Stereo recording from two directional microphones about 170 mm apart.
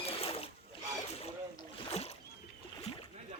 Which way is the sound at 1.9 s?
35° left (ahead or behind).